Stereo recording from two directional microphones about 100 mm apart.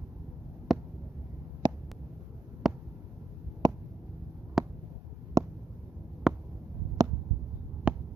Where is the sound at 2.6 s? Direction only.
5° right (ahead or behind).